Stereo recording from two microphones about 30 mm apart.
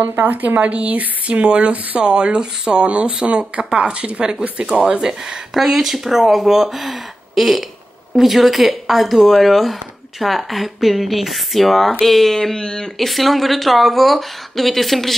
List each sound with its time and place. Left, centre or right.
0.0 s speech: right
0.6 s speech: right
1.4 s speech: right
4.8 s speech: right; by 12.5 s centre
12.5 s speech: left
12.9 s speech: centre